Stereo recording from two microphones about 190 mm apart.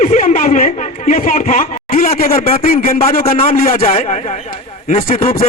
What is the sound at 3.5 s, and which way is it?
Speech, 45° left (ahead or behind).